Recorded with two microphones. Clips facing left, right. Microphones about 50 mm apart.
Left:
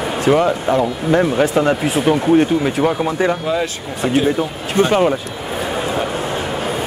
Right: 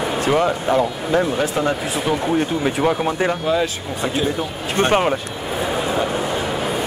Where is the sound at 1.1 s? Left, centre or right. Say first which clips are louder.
Left 4 dB; left.